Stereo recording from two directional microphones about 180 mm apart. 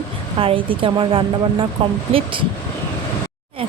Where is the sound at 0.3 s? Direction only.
30° right (ahead or behind).